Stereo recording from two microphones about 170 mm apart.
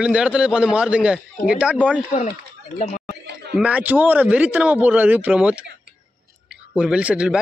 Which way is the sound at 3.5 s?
5° right (ahead or behind).